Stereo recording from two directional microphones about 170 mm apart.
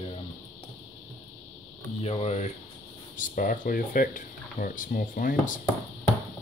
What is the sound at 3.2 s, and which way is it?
Speech, 55° left (ahead or behind).